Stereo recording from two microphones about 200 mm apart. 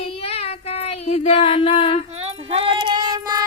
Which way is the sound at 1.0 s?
35° left (ahead or behind).